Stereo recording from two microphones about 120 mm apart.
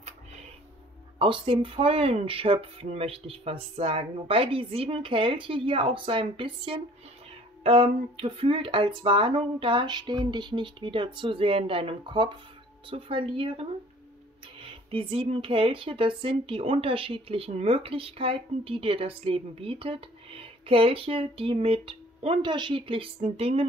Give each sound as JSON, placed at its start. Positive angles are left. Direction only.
{"t": 0.0, "sound": "music", "side_deg": -70}
{"t": 1.2, "sound": "speech", "side_deg": -45}